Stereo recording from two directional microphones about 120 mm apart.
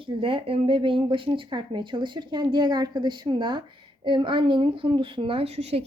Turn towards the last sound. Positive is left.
turn(degrees=-60)  # may be behind; listen again after turning